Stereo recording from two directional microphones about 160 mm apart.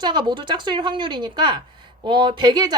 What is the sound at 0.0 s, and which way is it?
A woman's voice, 30° right (ahead or behind).